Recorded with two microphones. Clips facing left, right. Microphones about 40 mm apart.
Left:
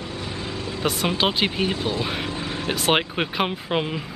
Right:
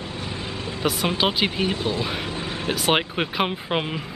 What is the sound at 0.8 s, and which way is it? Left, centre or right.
Speech, centre.